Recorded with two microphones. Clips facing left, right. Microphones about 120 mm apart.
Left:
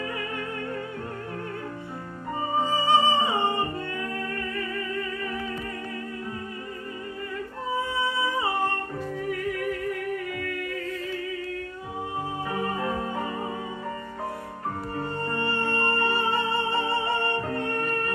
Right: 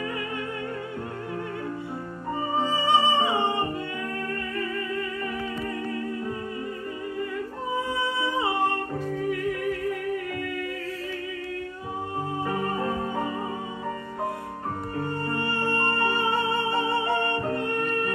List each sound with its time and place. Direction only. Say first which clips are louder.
2.6 s music: left 1 dB; 15° right (ahead or behind)
15.0 s music: right 1 dB; 10° right (ahead or behind)